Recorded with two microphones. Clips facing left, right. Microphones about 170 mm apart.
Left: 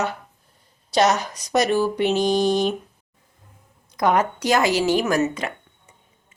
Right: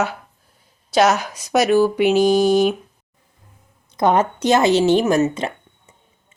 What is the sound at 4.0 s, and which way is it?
A woman's voice, 25° right (ahead or behind).